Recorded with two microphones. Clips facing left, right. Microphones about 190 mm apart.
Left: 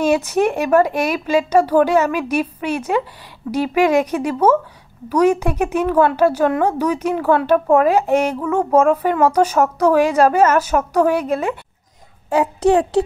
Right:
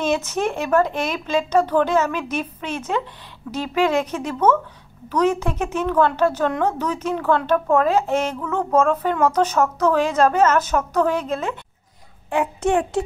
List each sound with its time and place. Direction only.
0.0 s a woman's voice: 10° left (ahead or behind)
12.3 s a child's voice: 35° left (ahead or behind)